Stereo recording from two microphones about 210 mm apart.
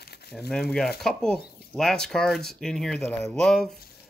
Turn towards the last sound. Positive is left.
turn(degrees=0)  # may be behind; listen again after turning